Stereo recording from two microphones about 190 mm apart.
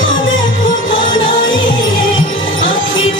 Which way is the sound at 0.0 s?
90° left.